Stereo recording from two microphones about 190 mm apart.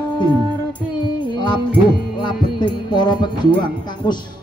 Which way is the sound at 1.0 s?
25° left (ahead or behind).